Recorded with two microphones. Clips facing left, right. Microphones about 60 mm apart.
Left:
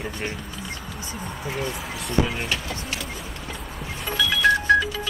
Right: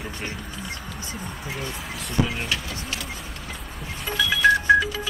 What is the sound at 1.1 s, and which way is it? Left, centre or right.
Speech, centre.